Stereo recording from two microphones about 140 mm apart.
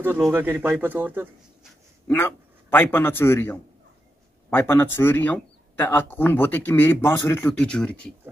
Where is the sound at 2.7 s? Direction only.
15° left (ahead or behind).